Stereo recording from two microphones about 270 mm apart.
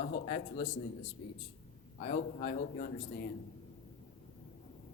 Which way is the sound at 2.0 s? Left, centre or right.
Left.